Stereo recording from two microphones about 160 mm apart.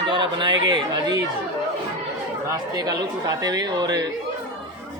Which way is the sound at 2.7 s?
25° right (ahead or behind).